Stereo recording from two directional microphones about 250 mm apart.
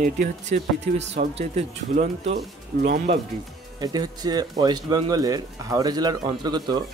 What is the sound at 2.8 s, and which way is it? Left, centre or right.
Speech, right.